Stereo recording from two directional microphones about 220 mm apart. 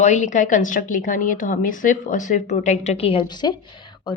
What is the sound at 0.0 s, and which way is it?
A woman's voice, 35° left (ahead or behind).